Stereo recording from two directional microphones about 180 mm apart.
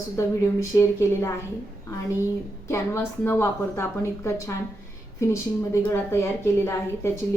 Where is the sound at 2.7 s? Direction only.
10° left (ahead or behind).